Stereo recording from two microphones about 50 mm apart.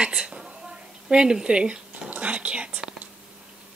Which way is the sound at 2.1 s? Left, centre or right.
Right.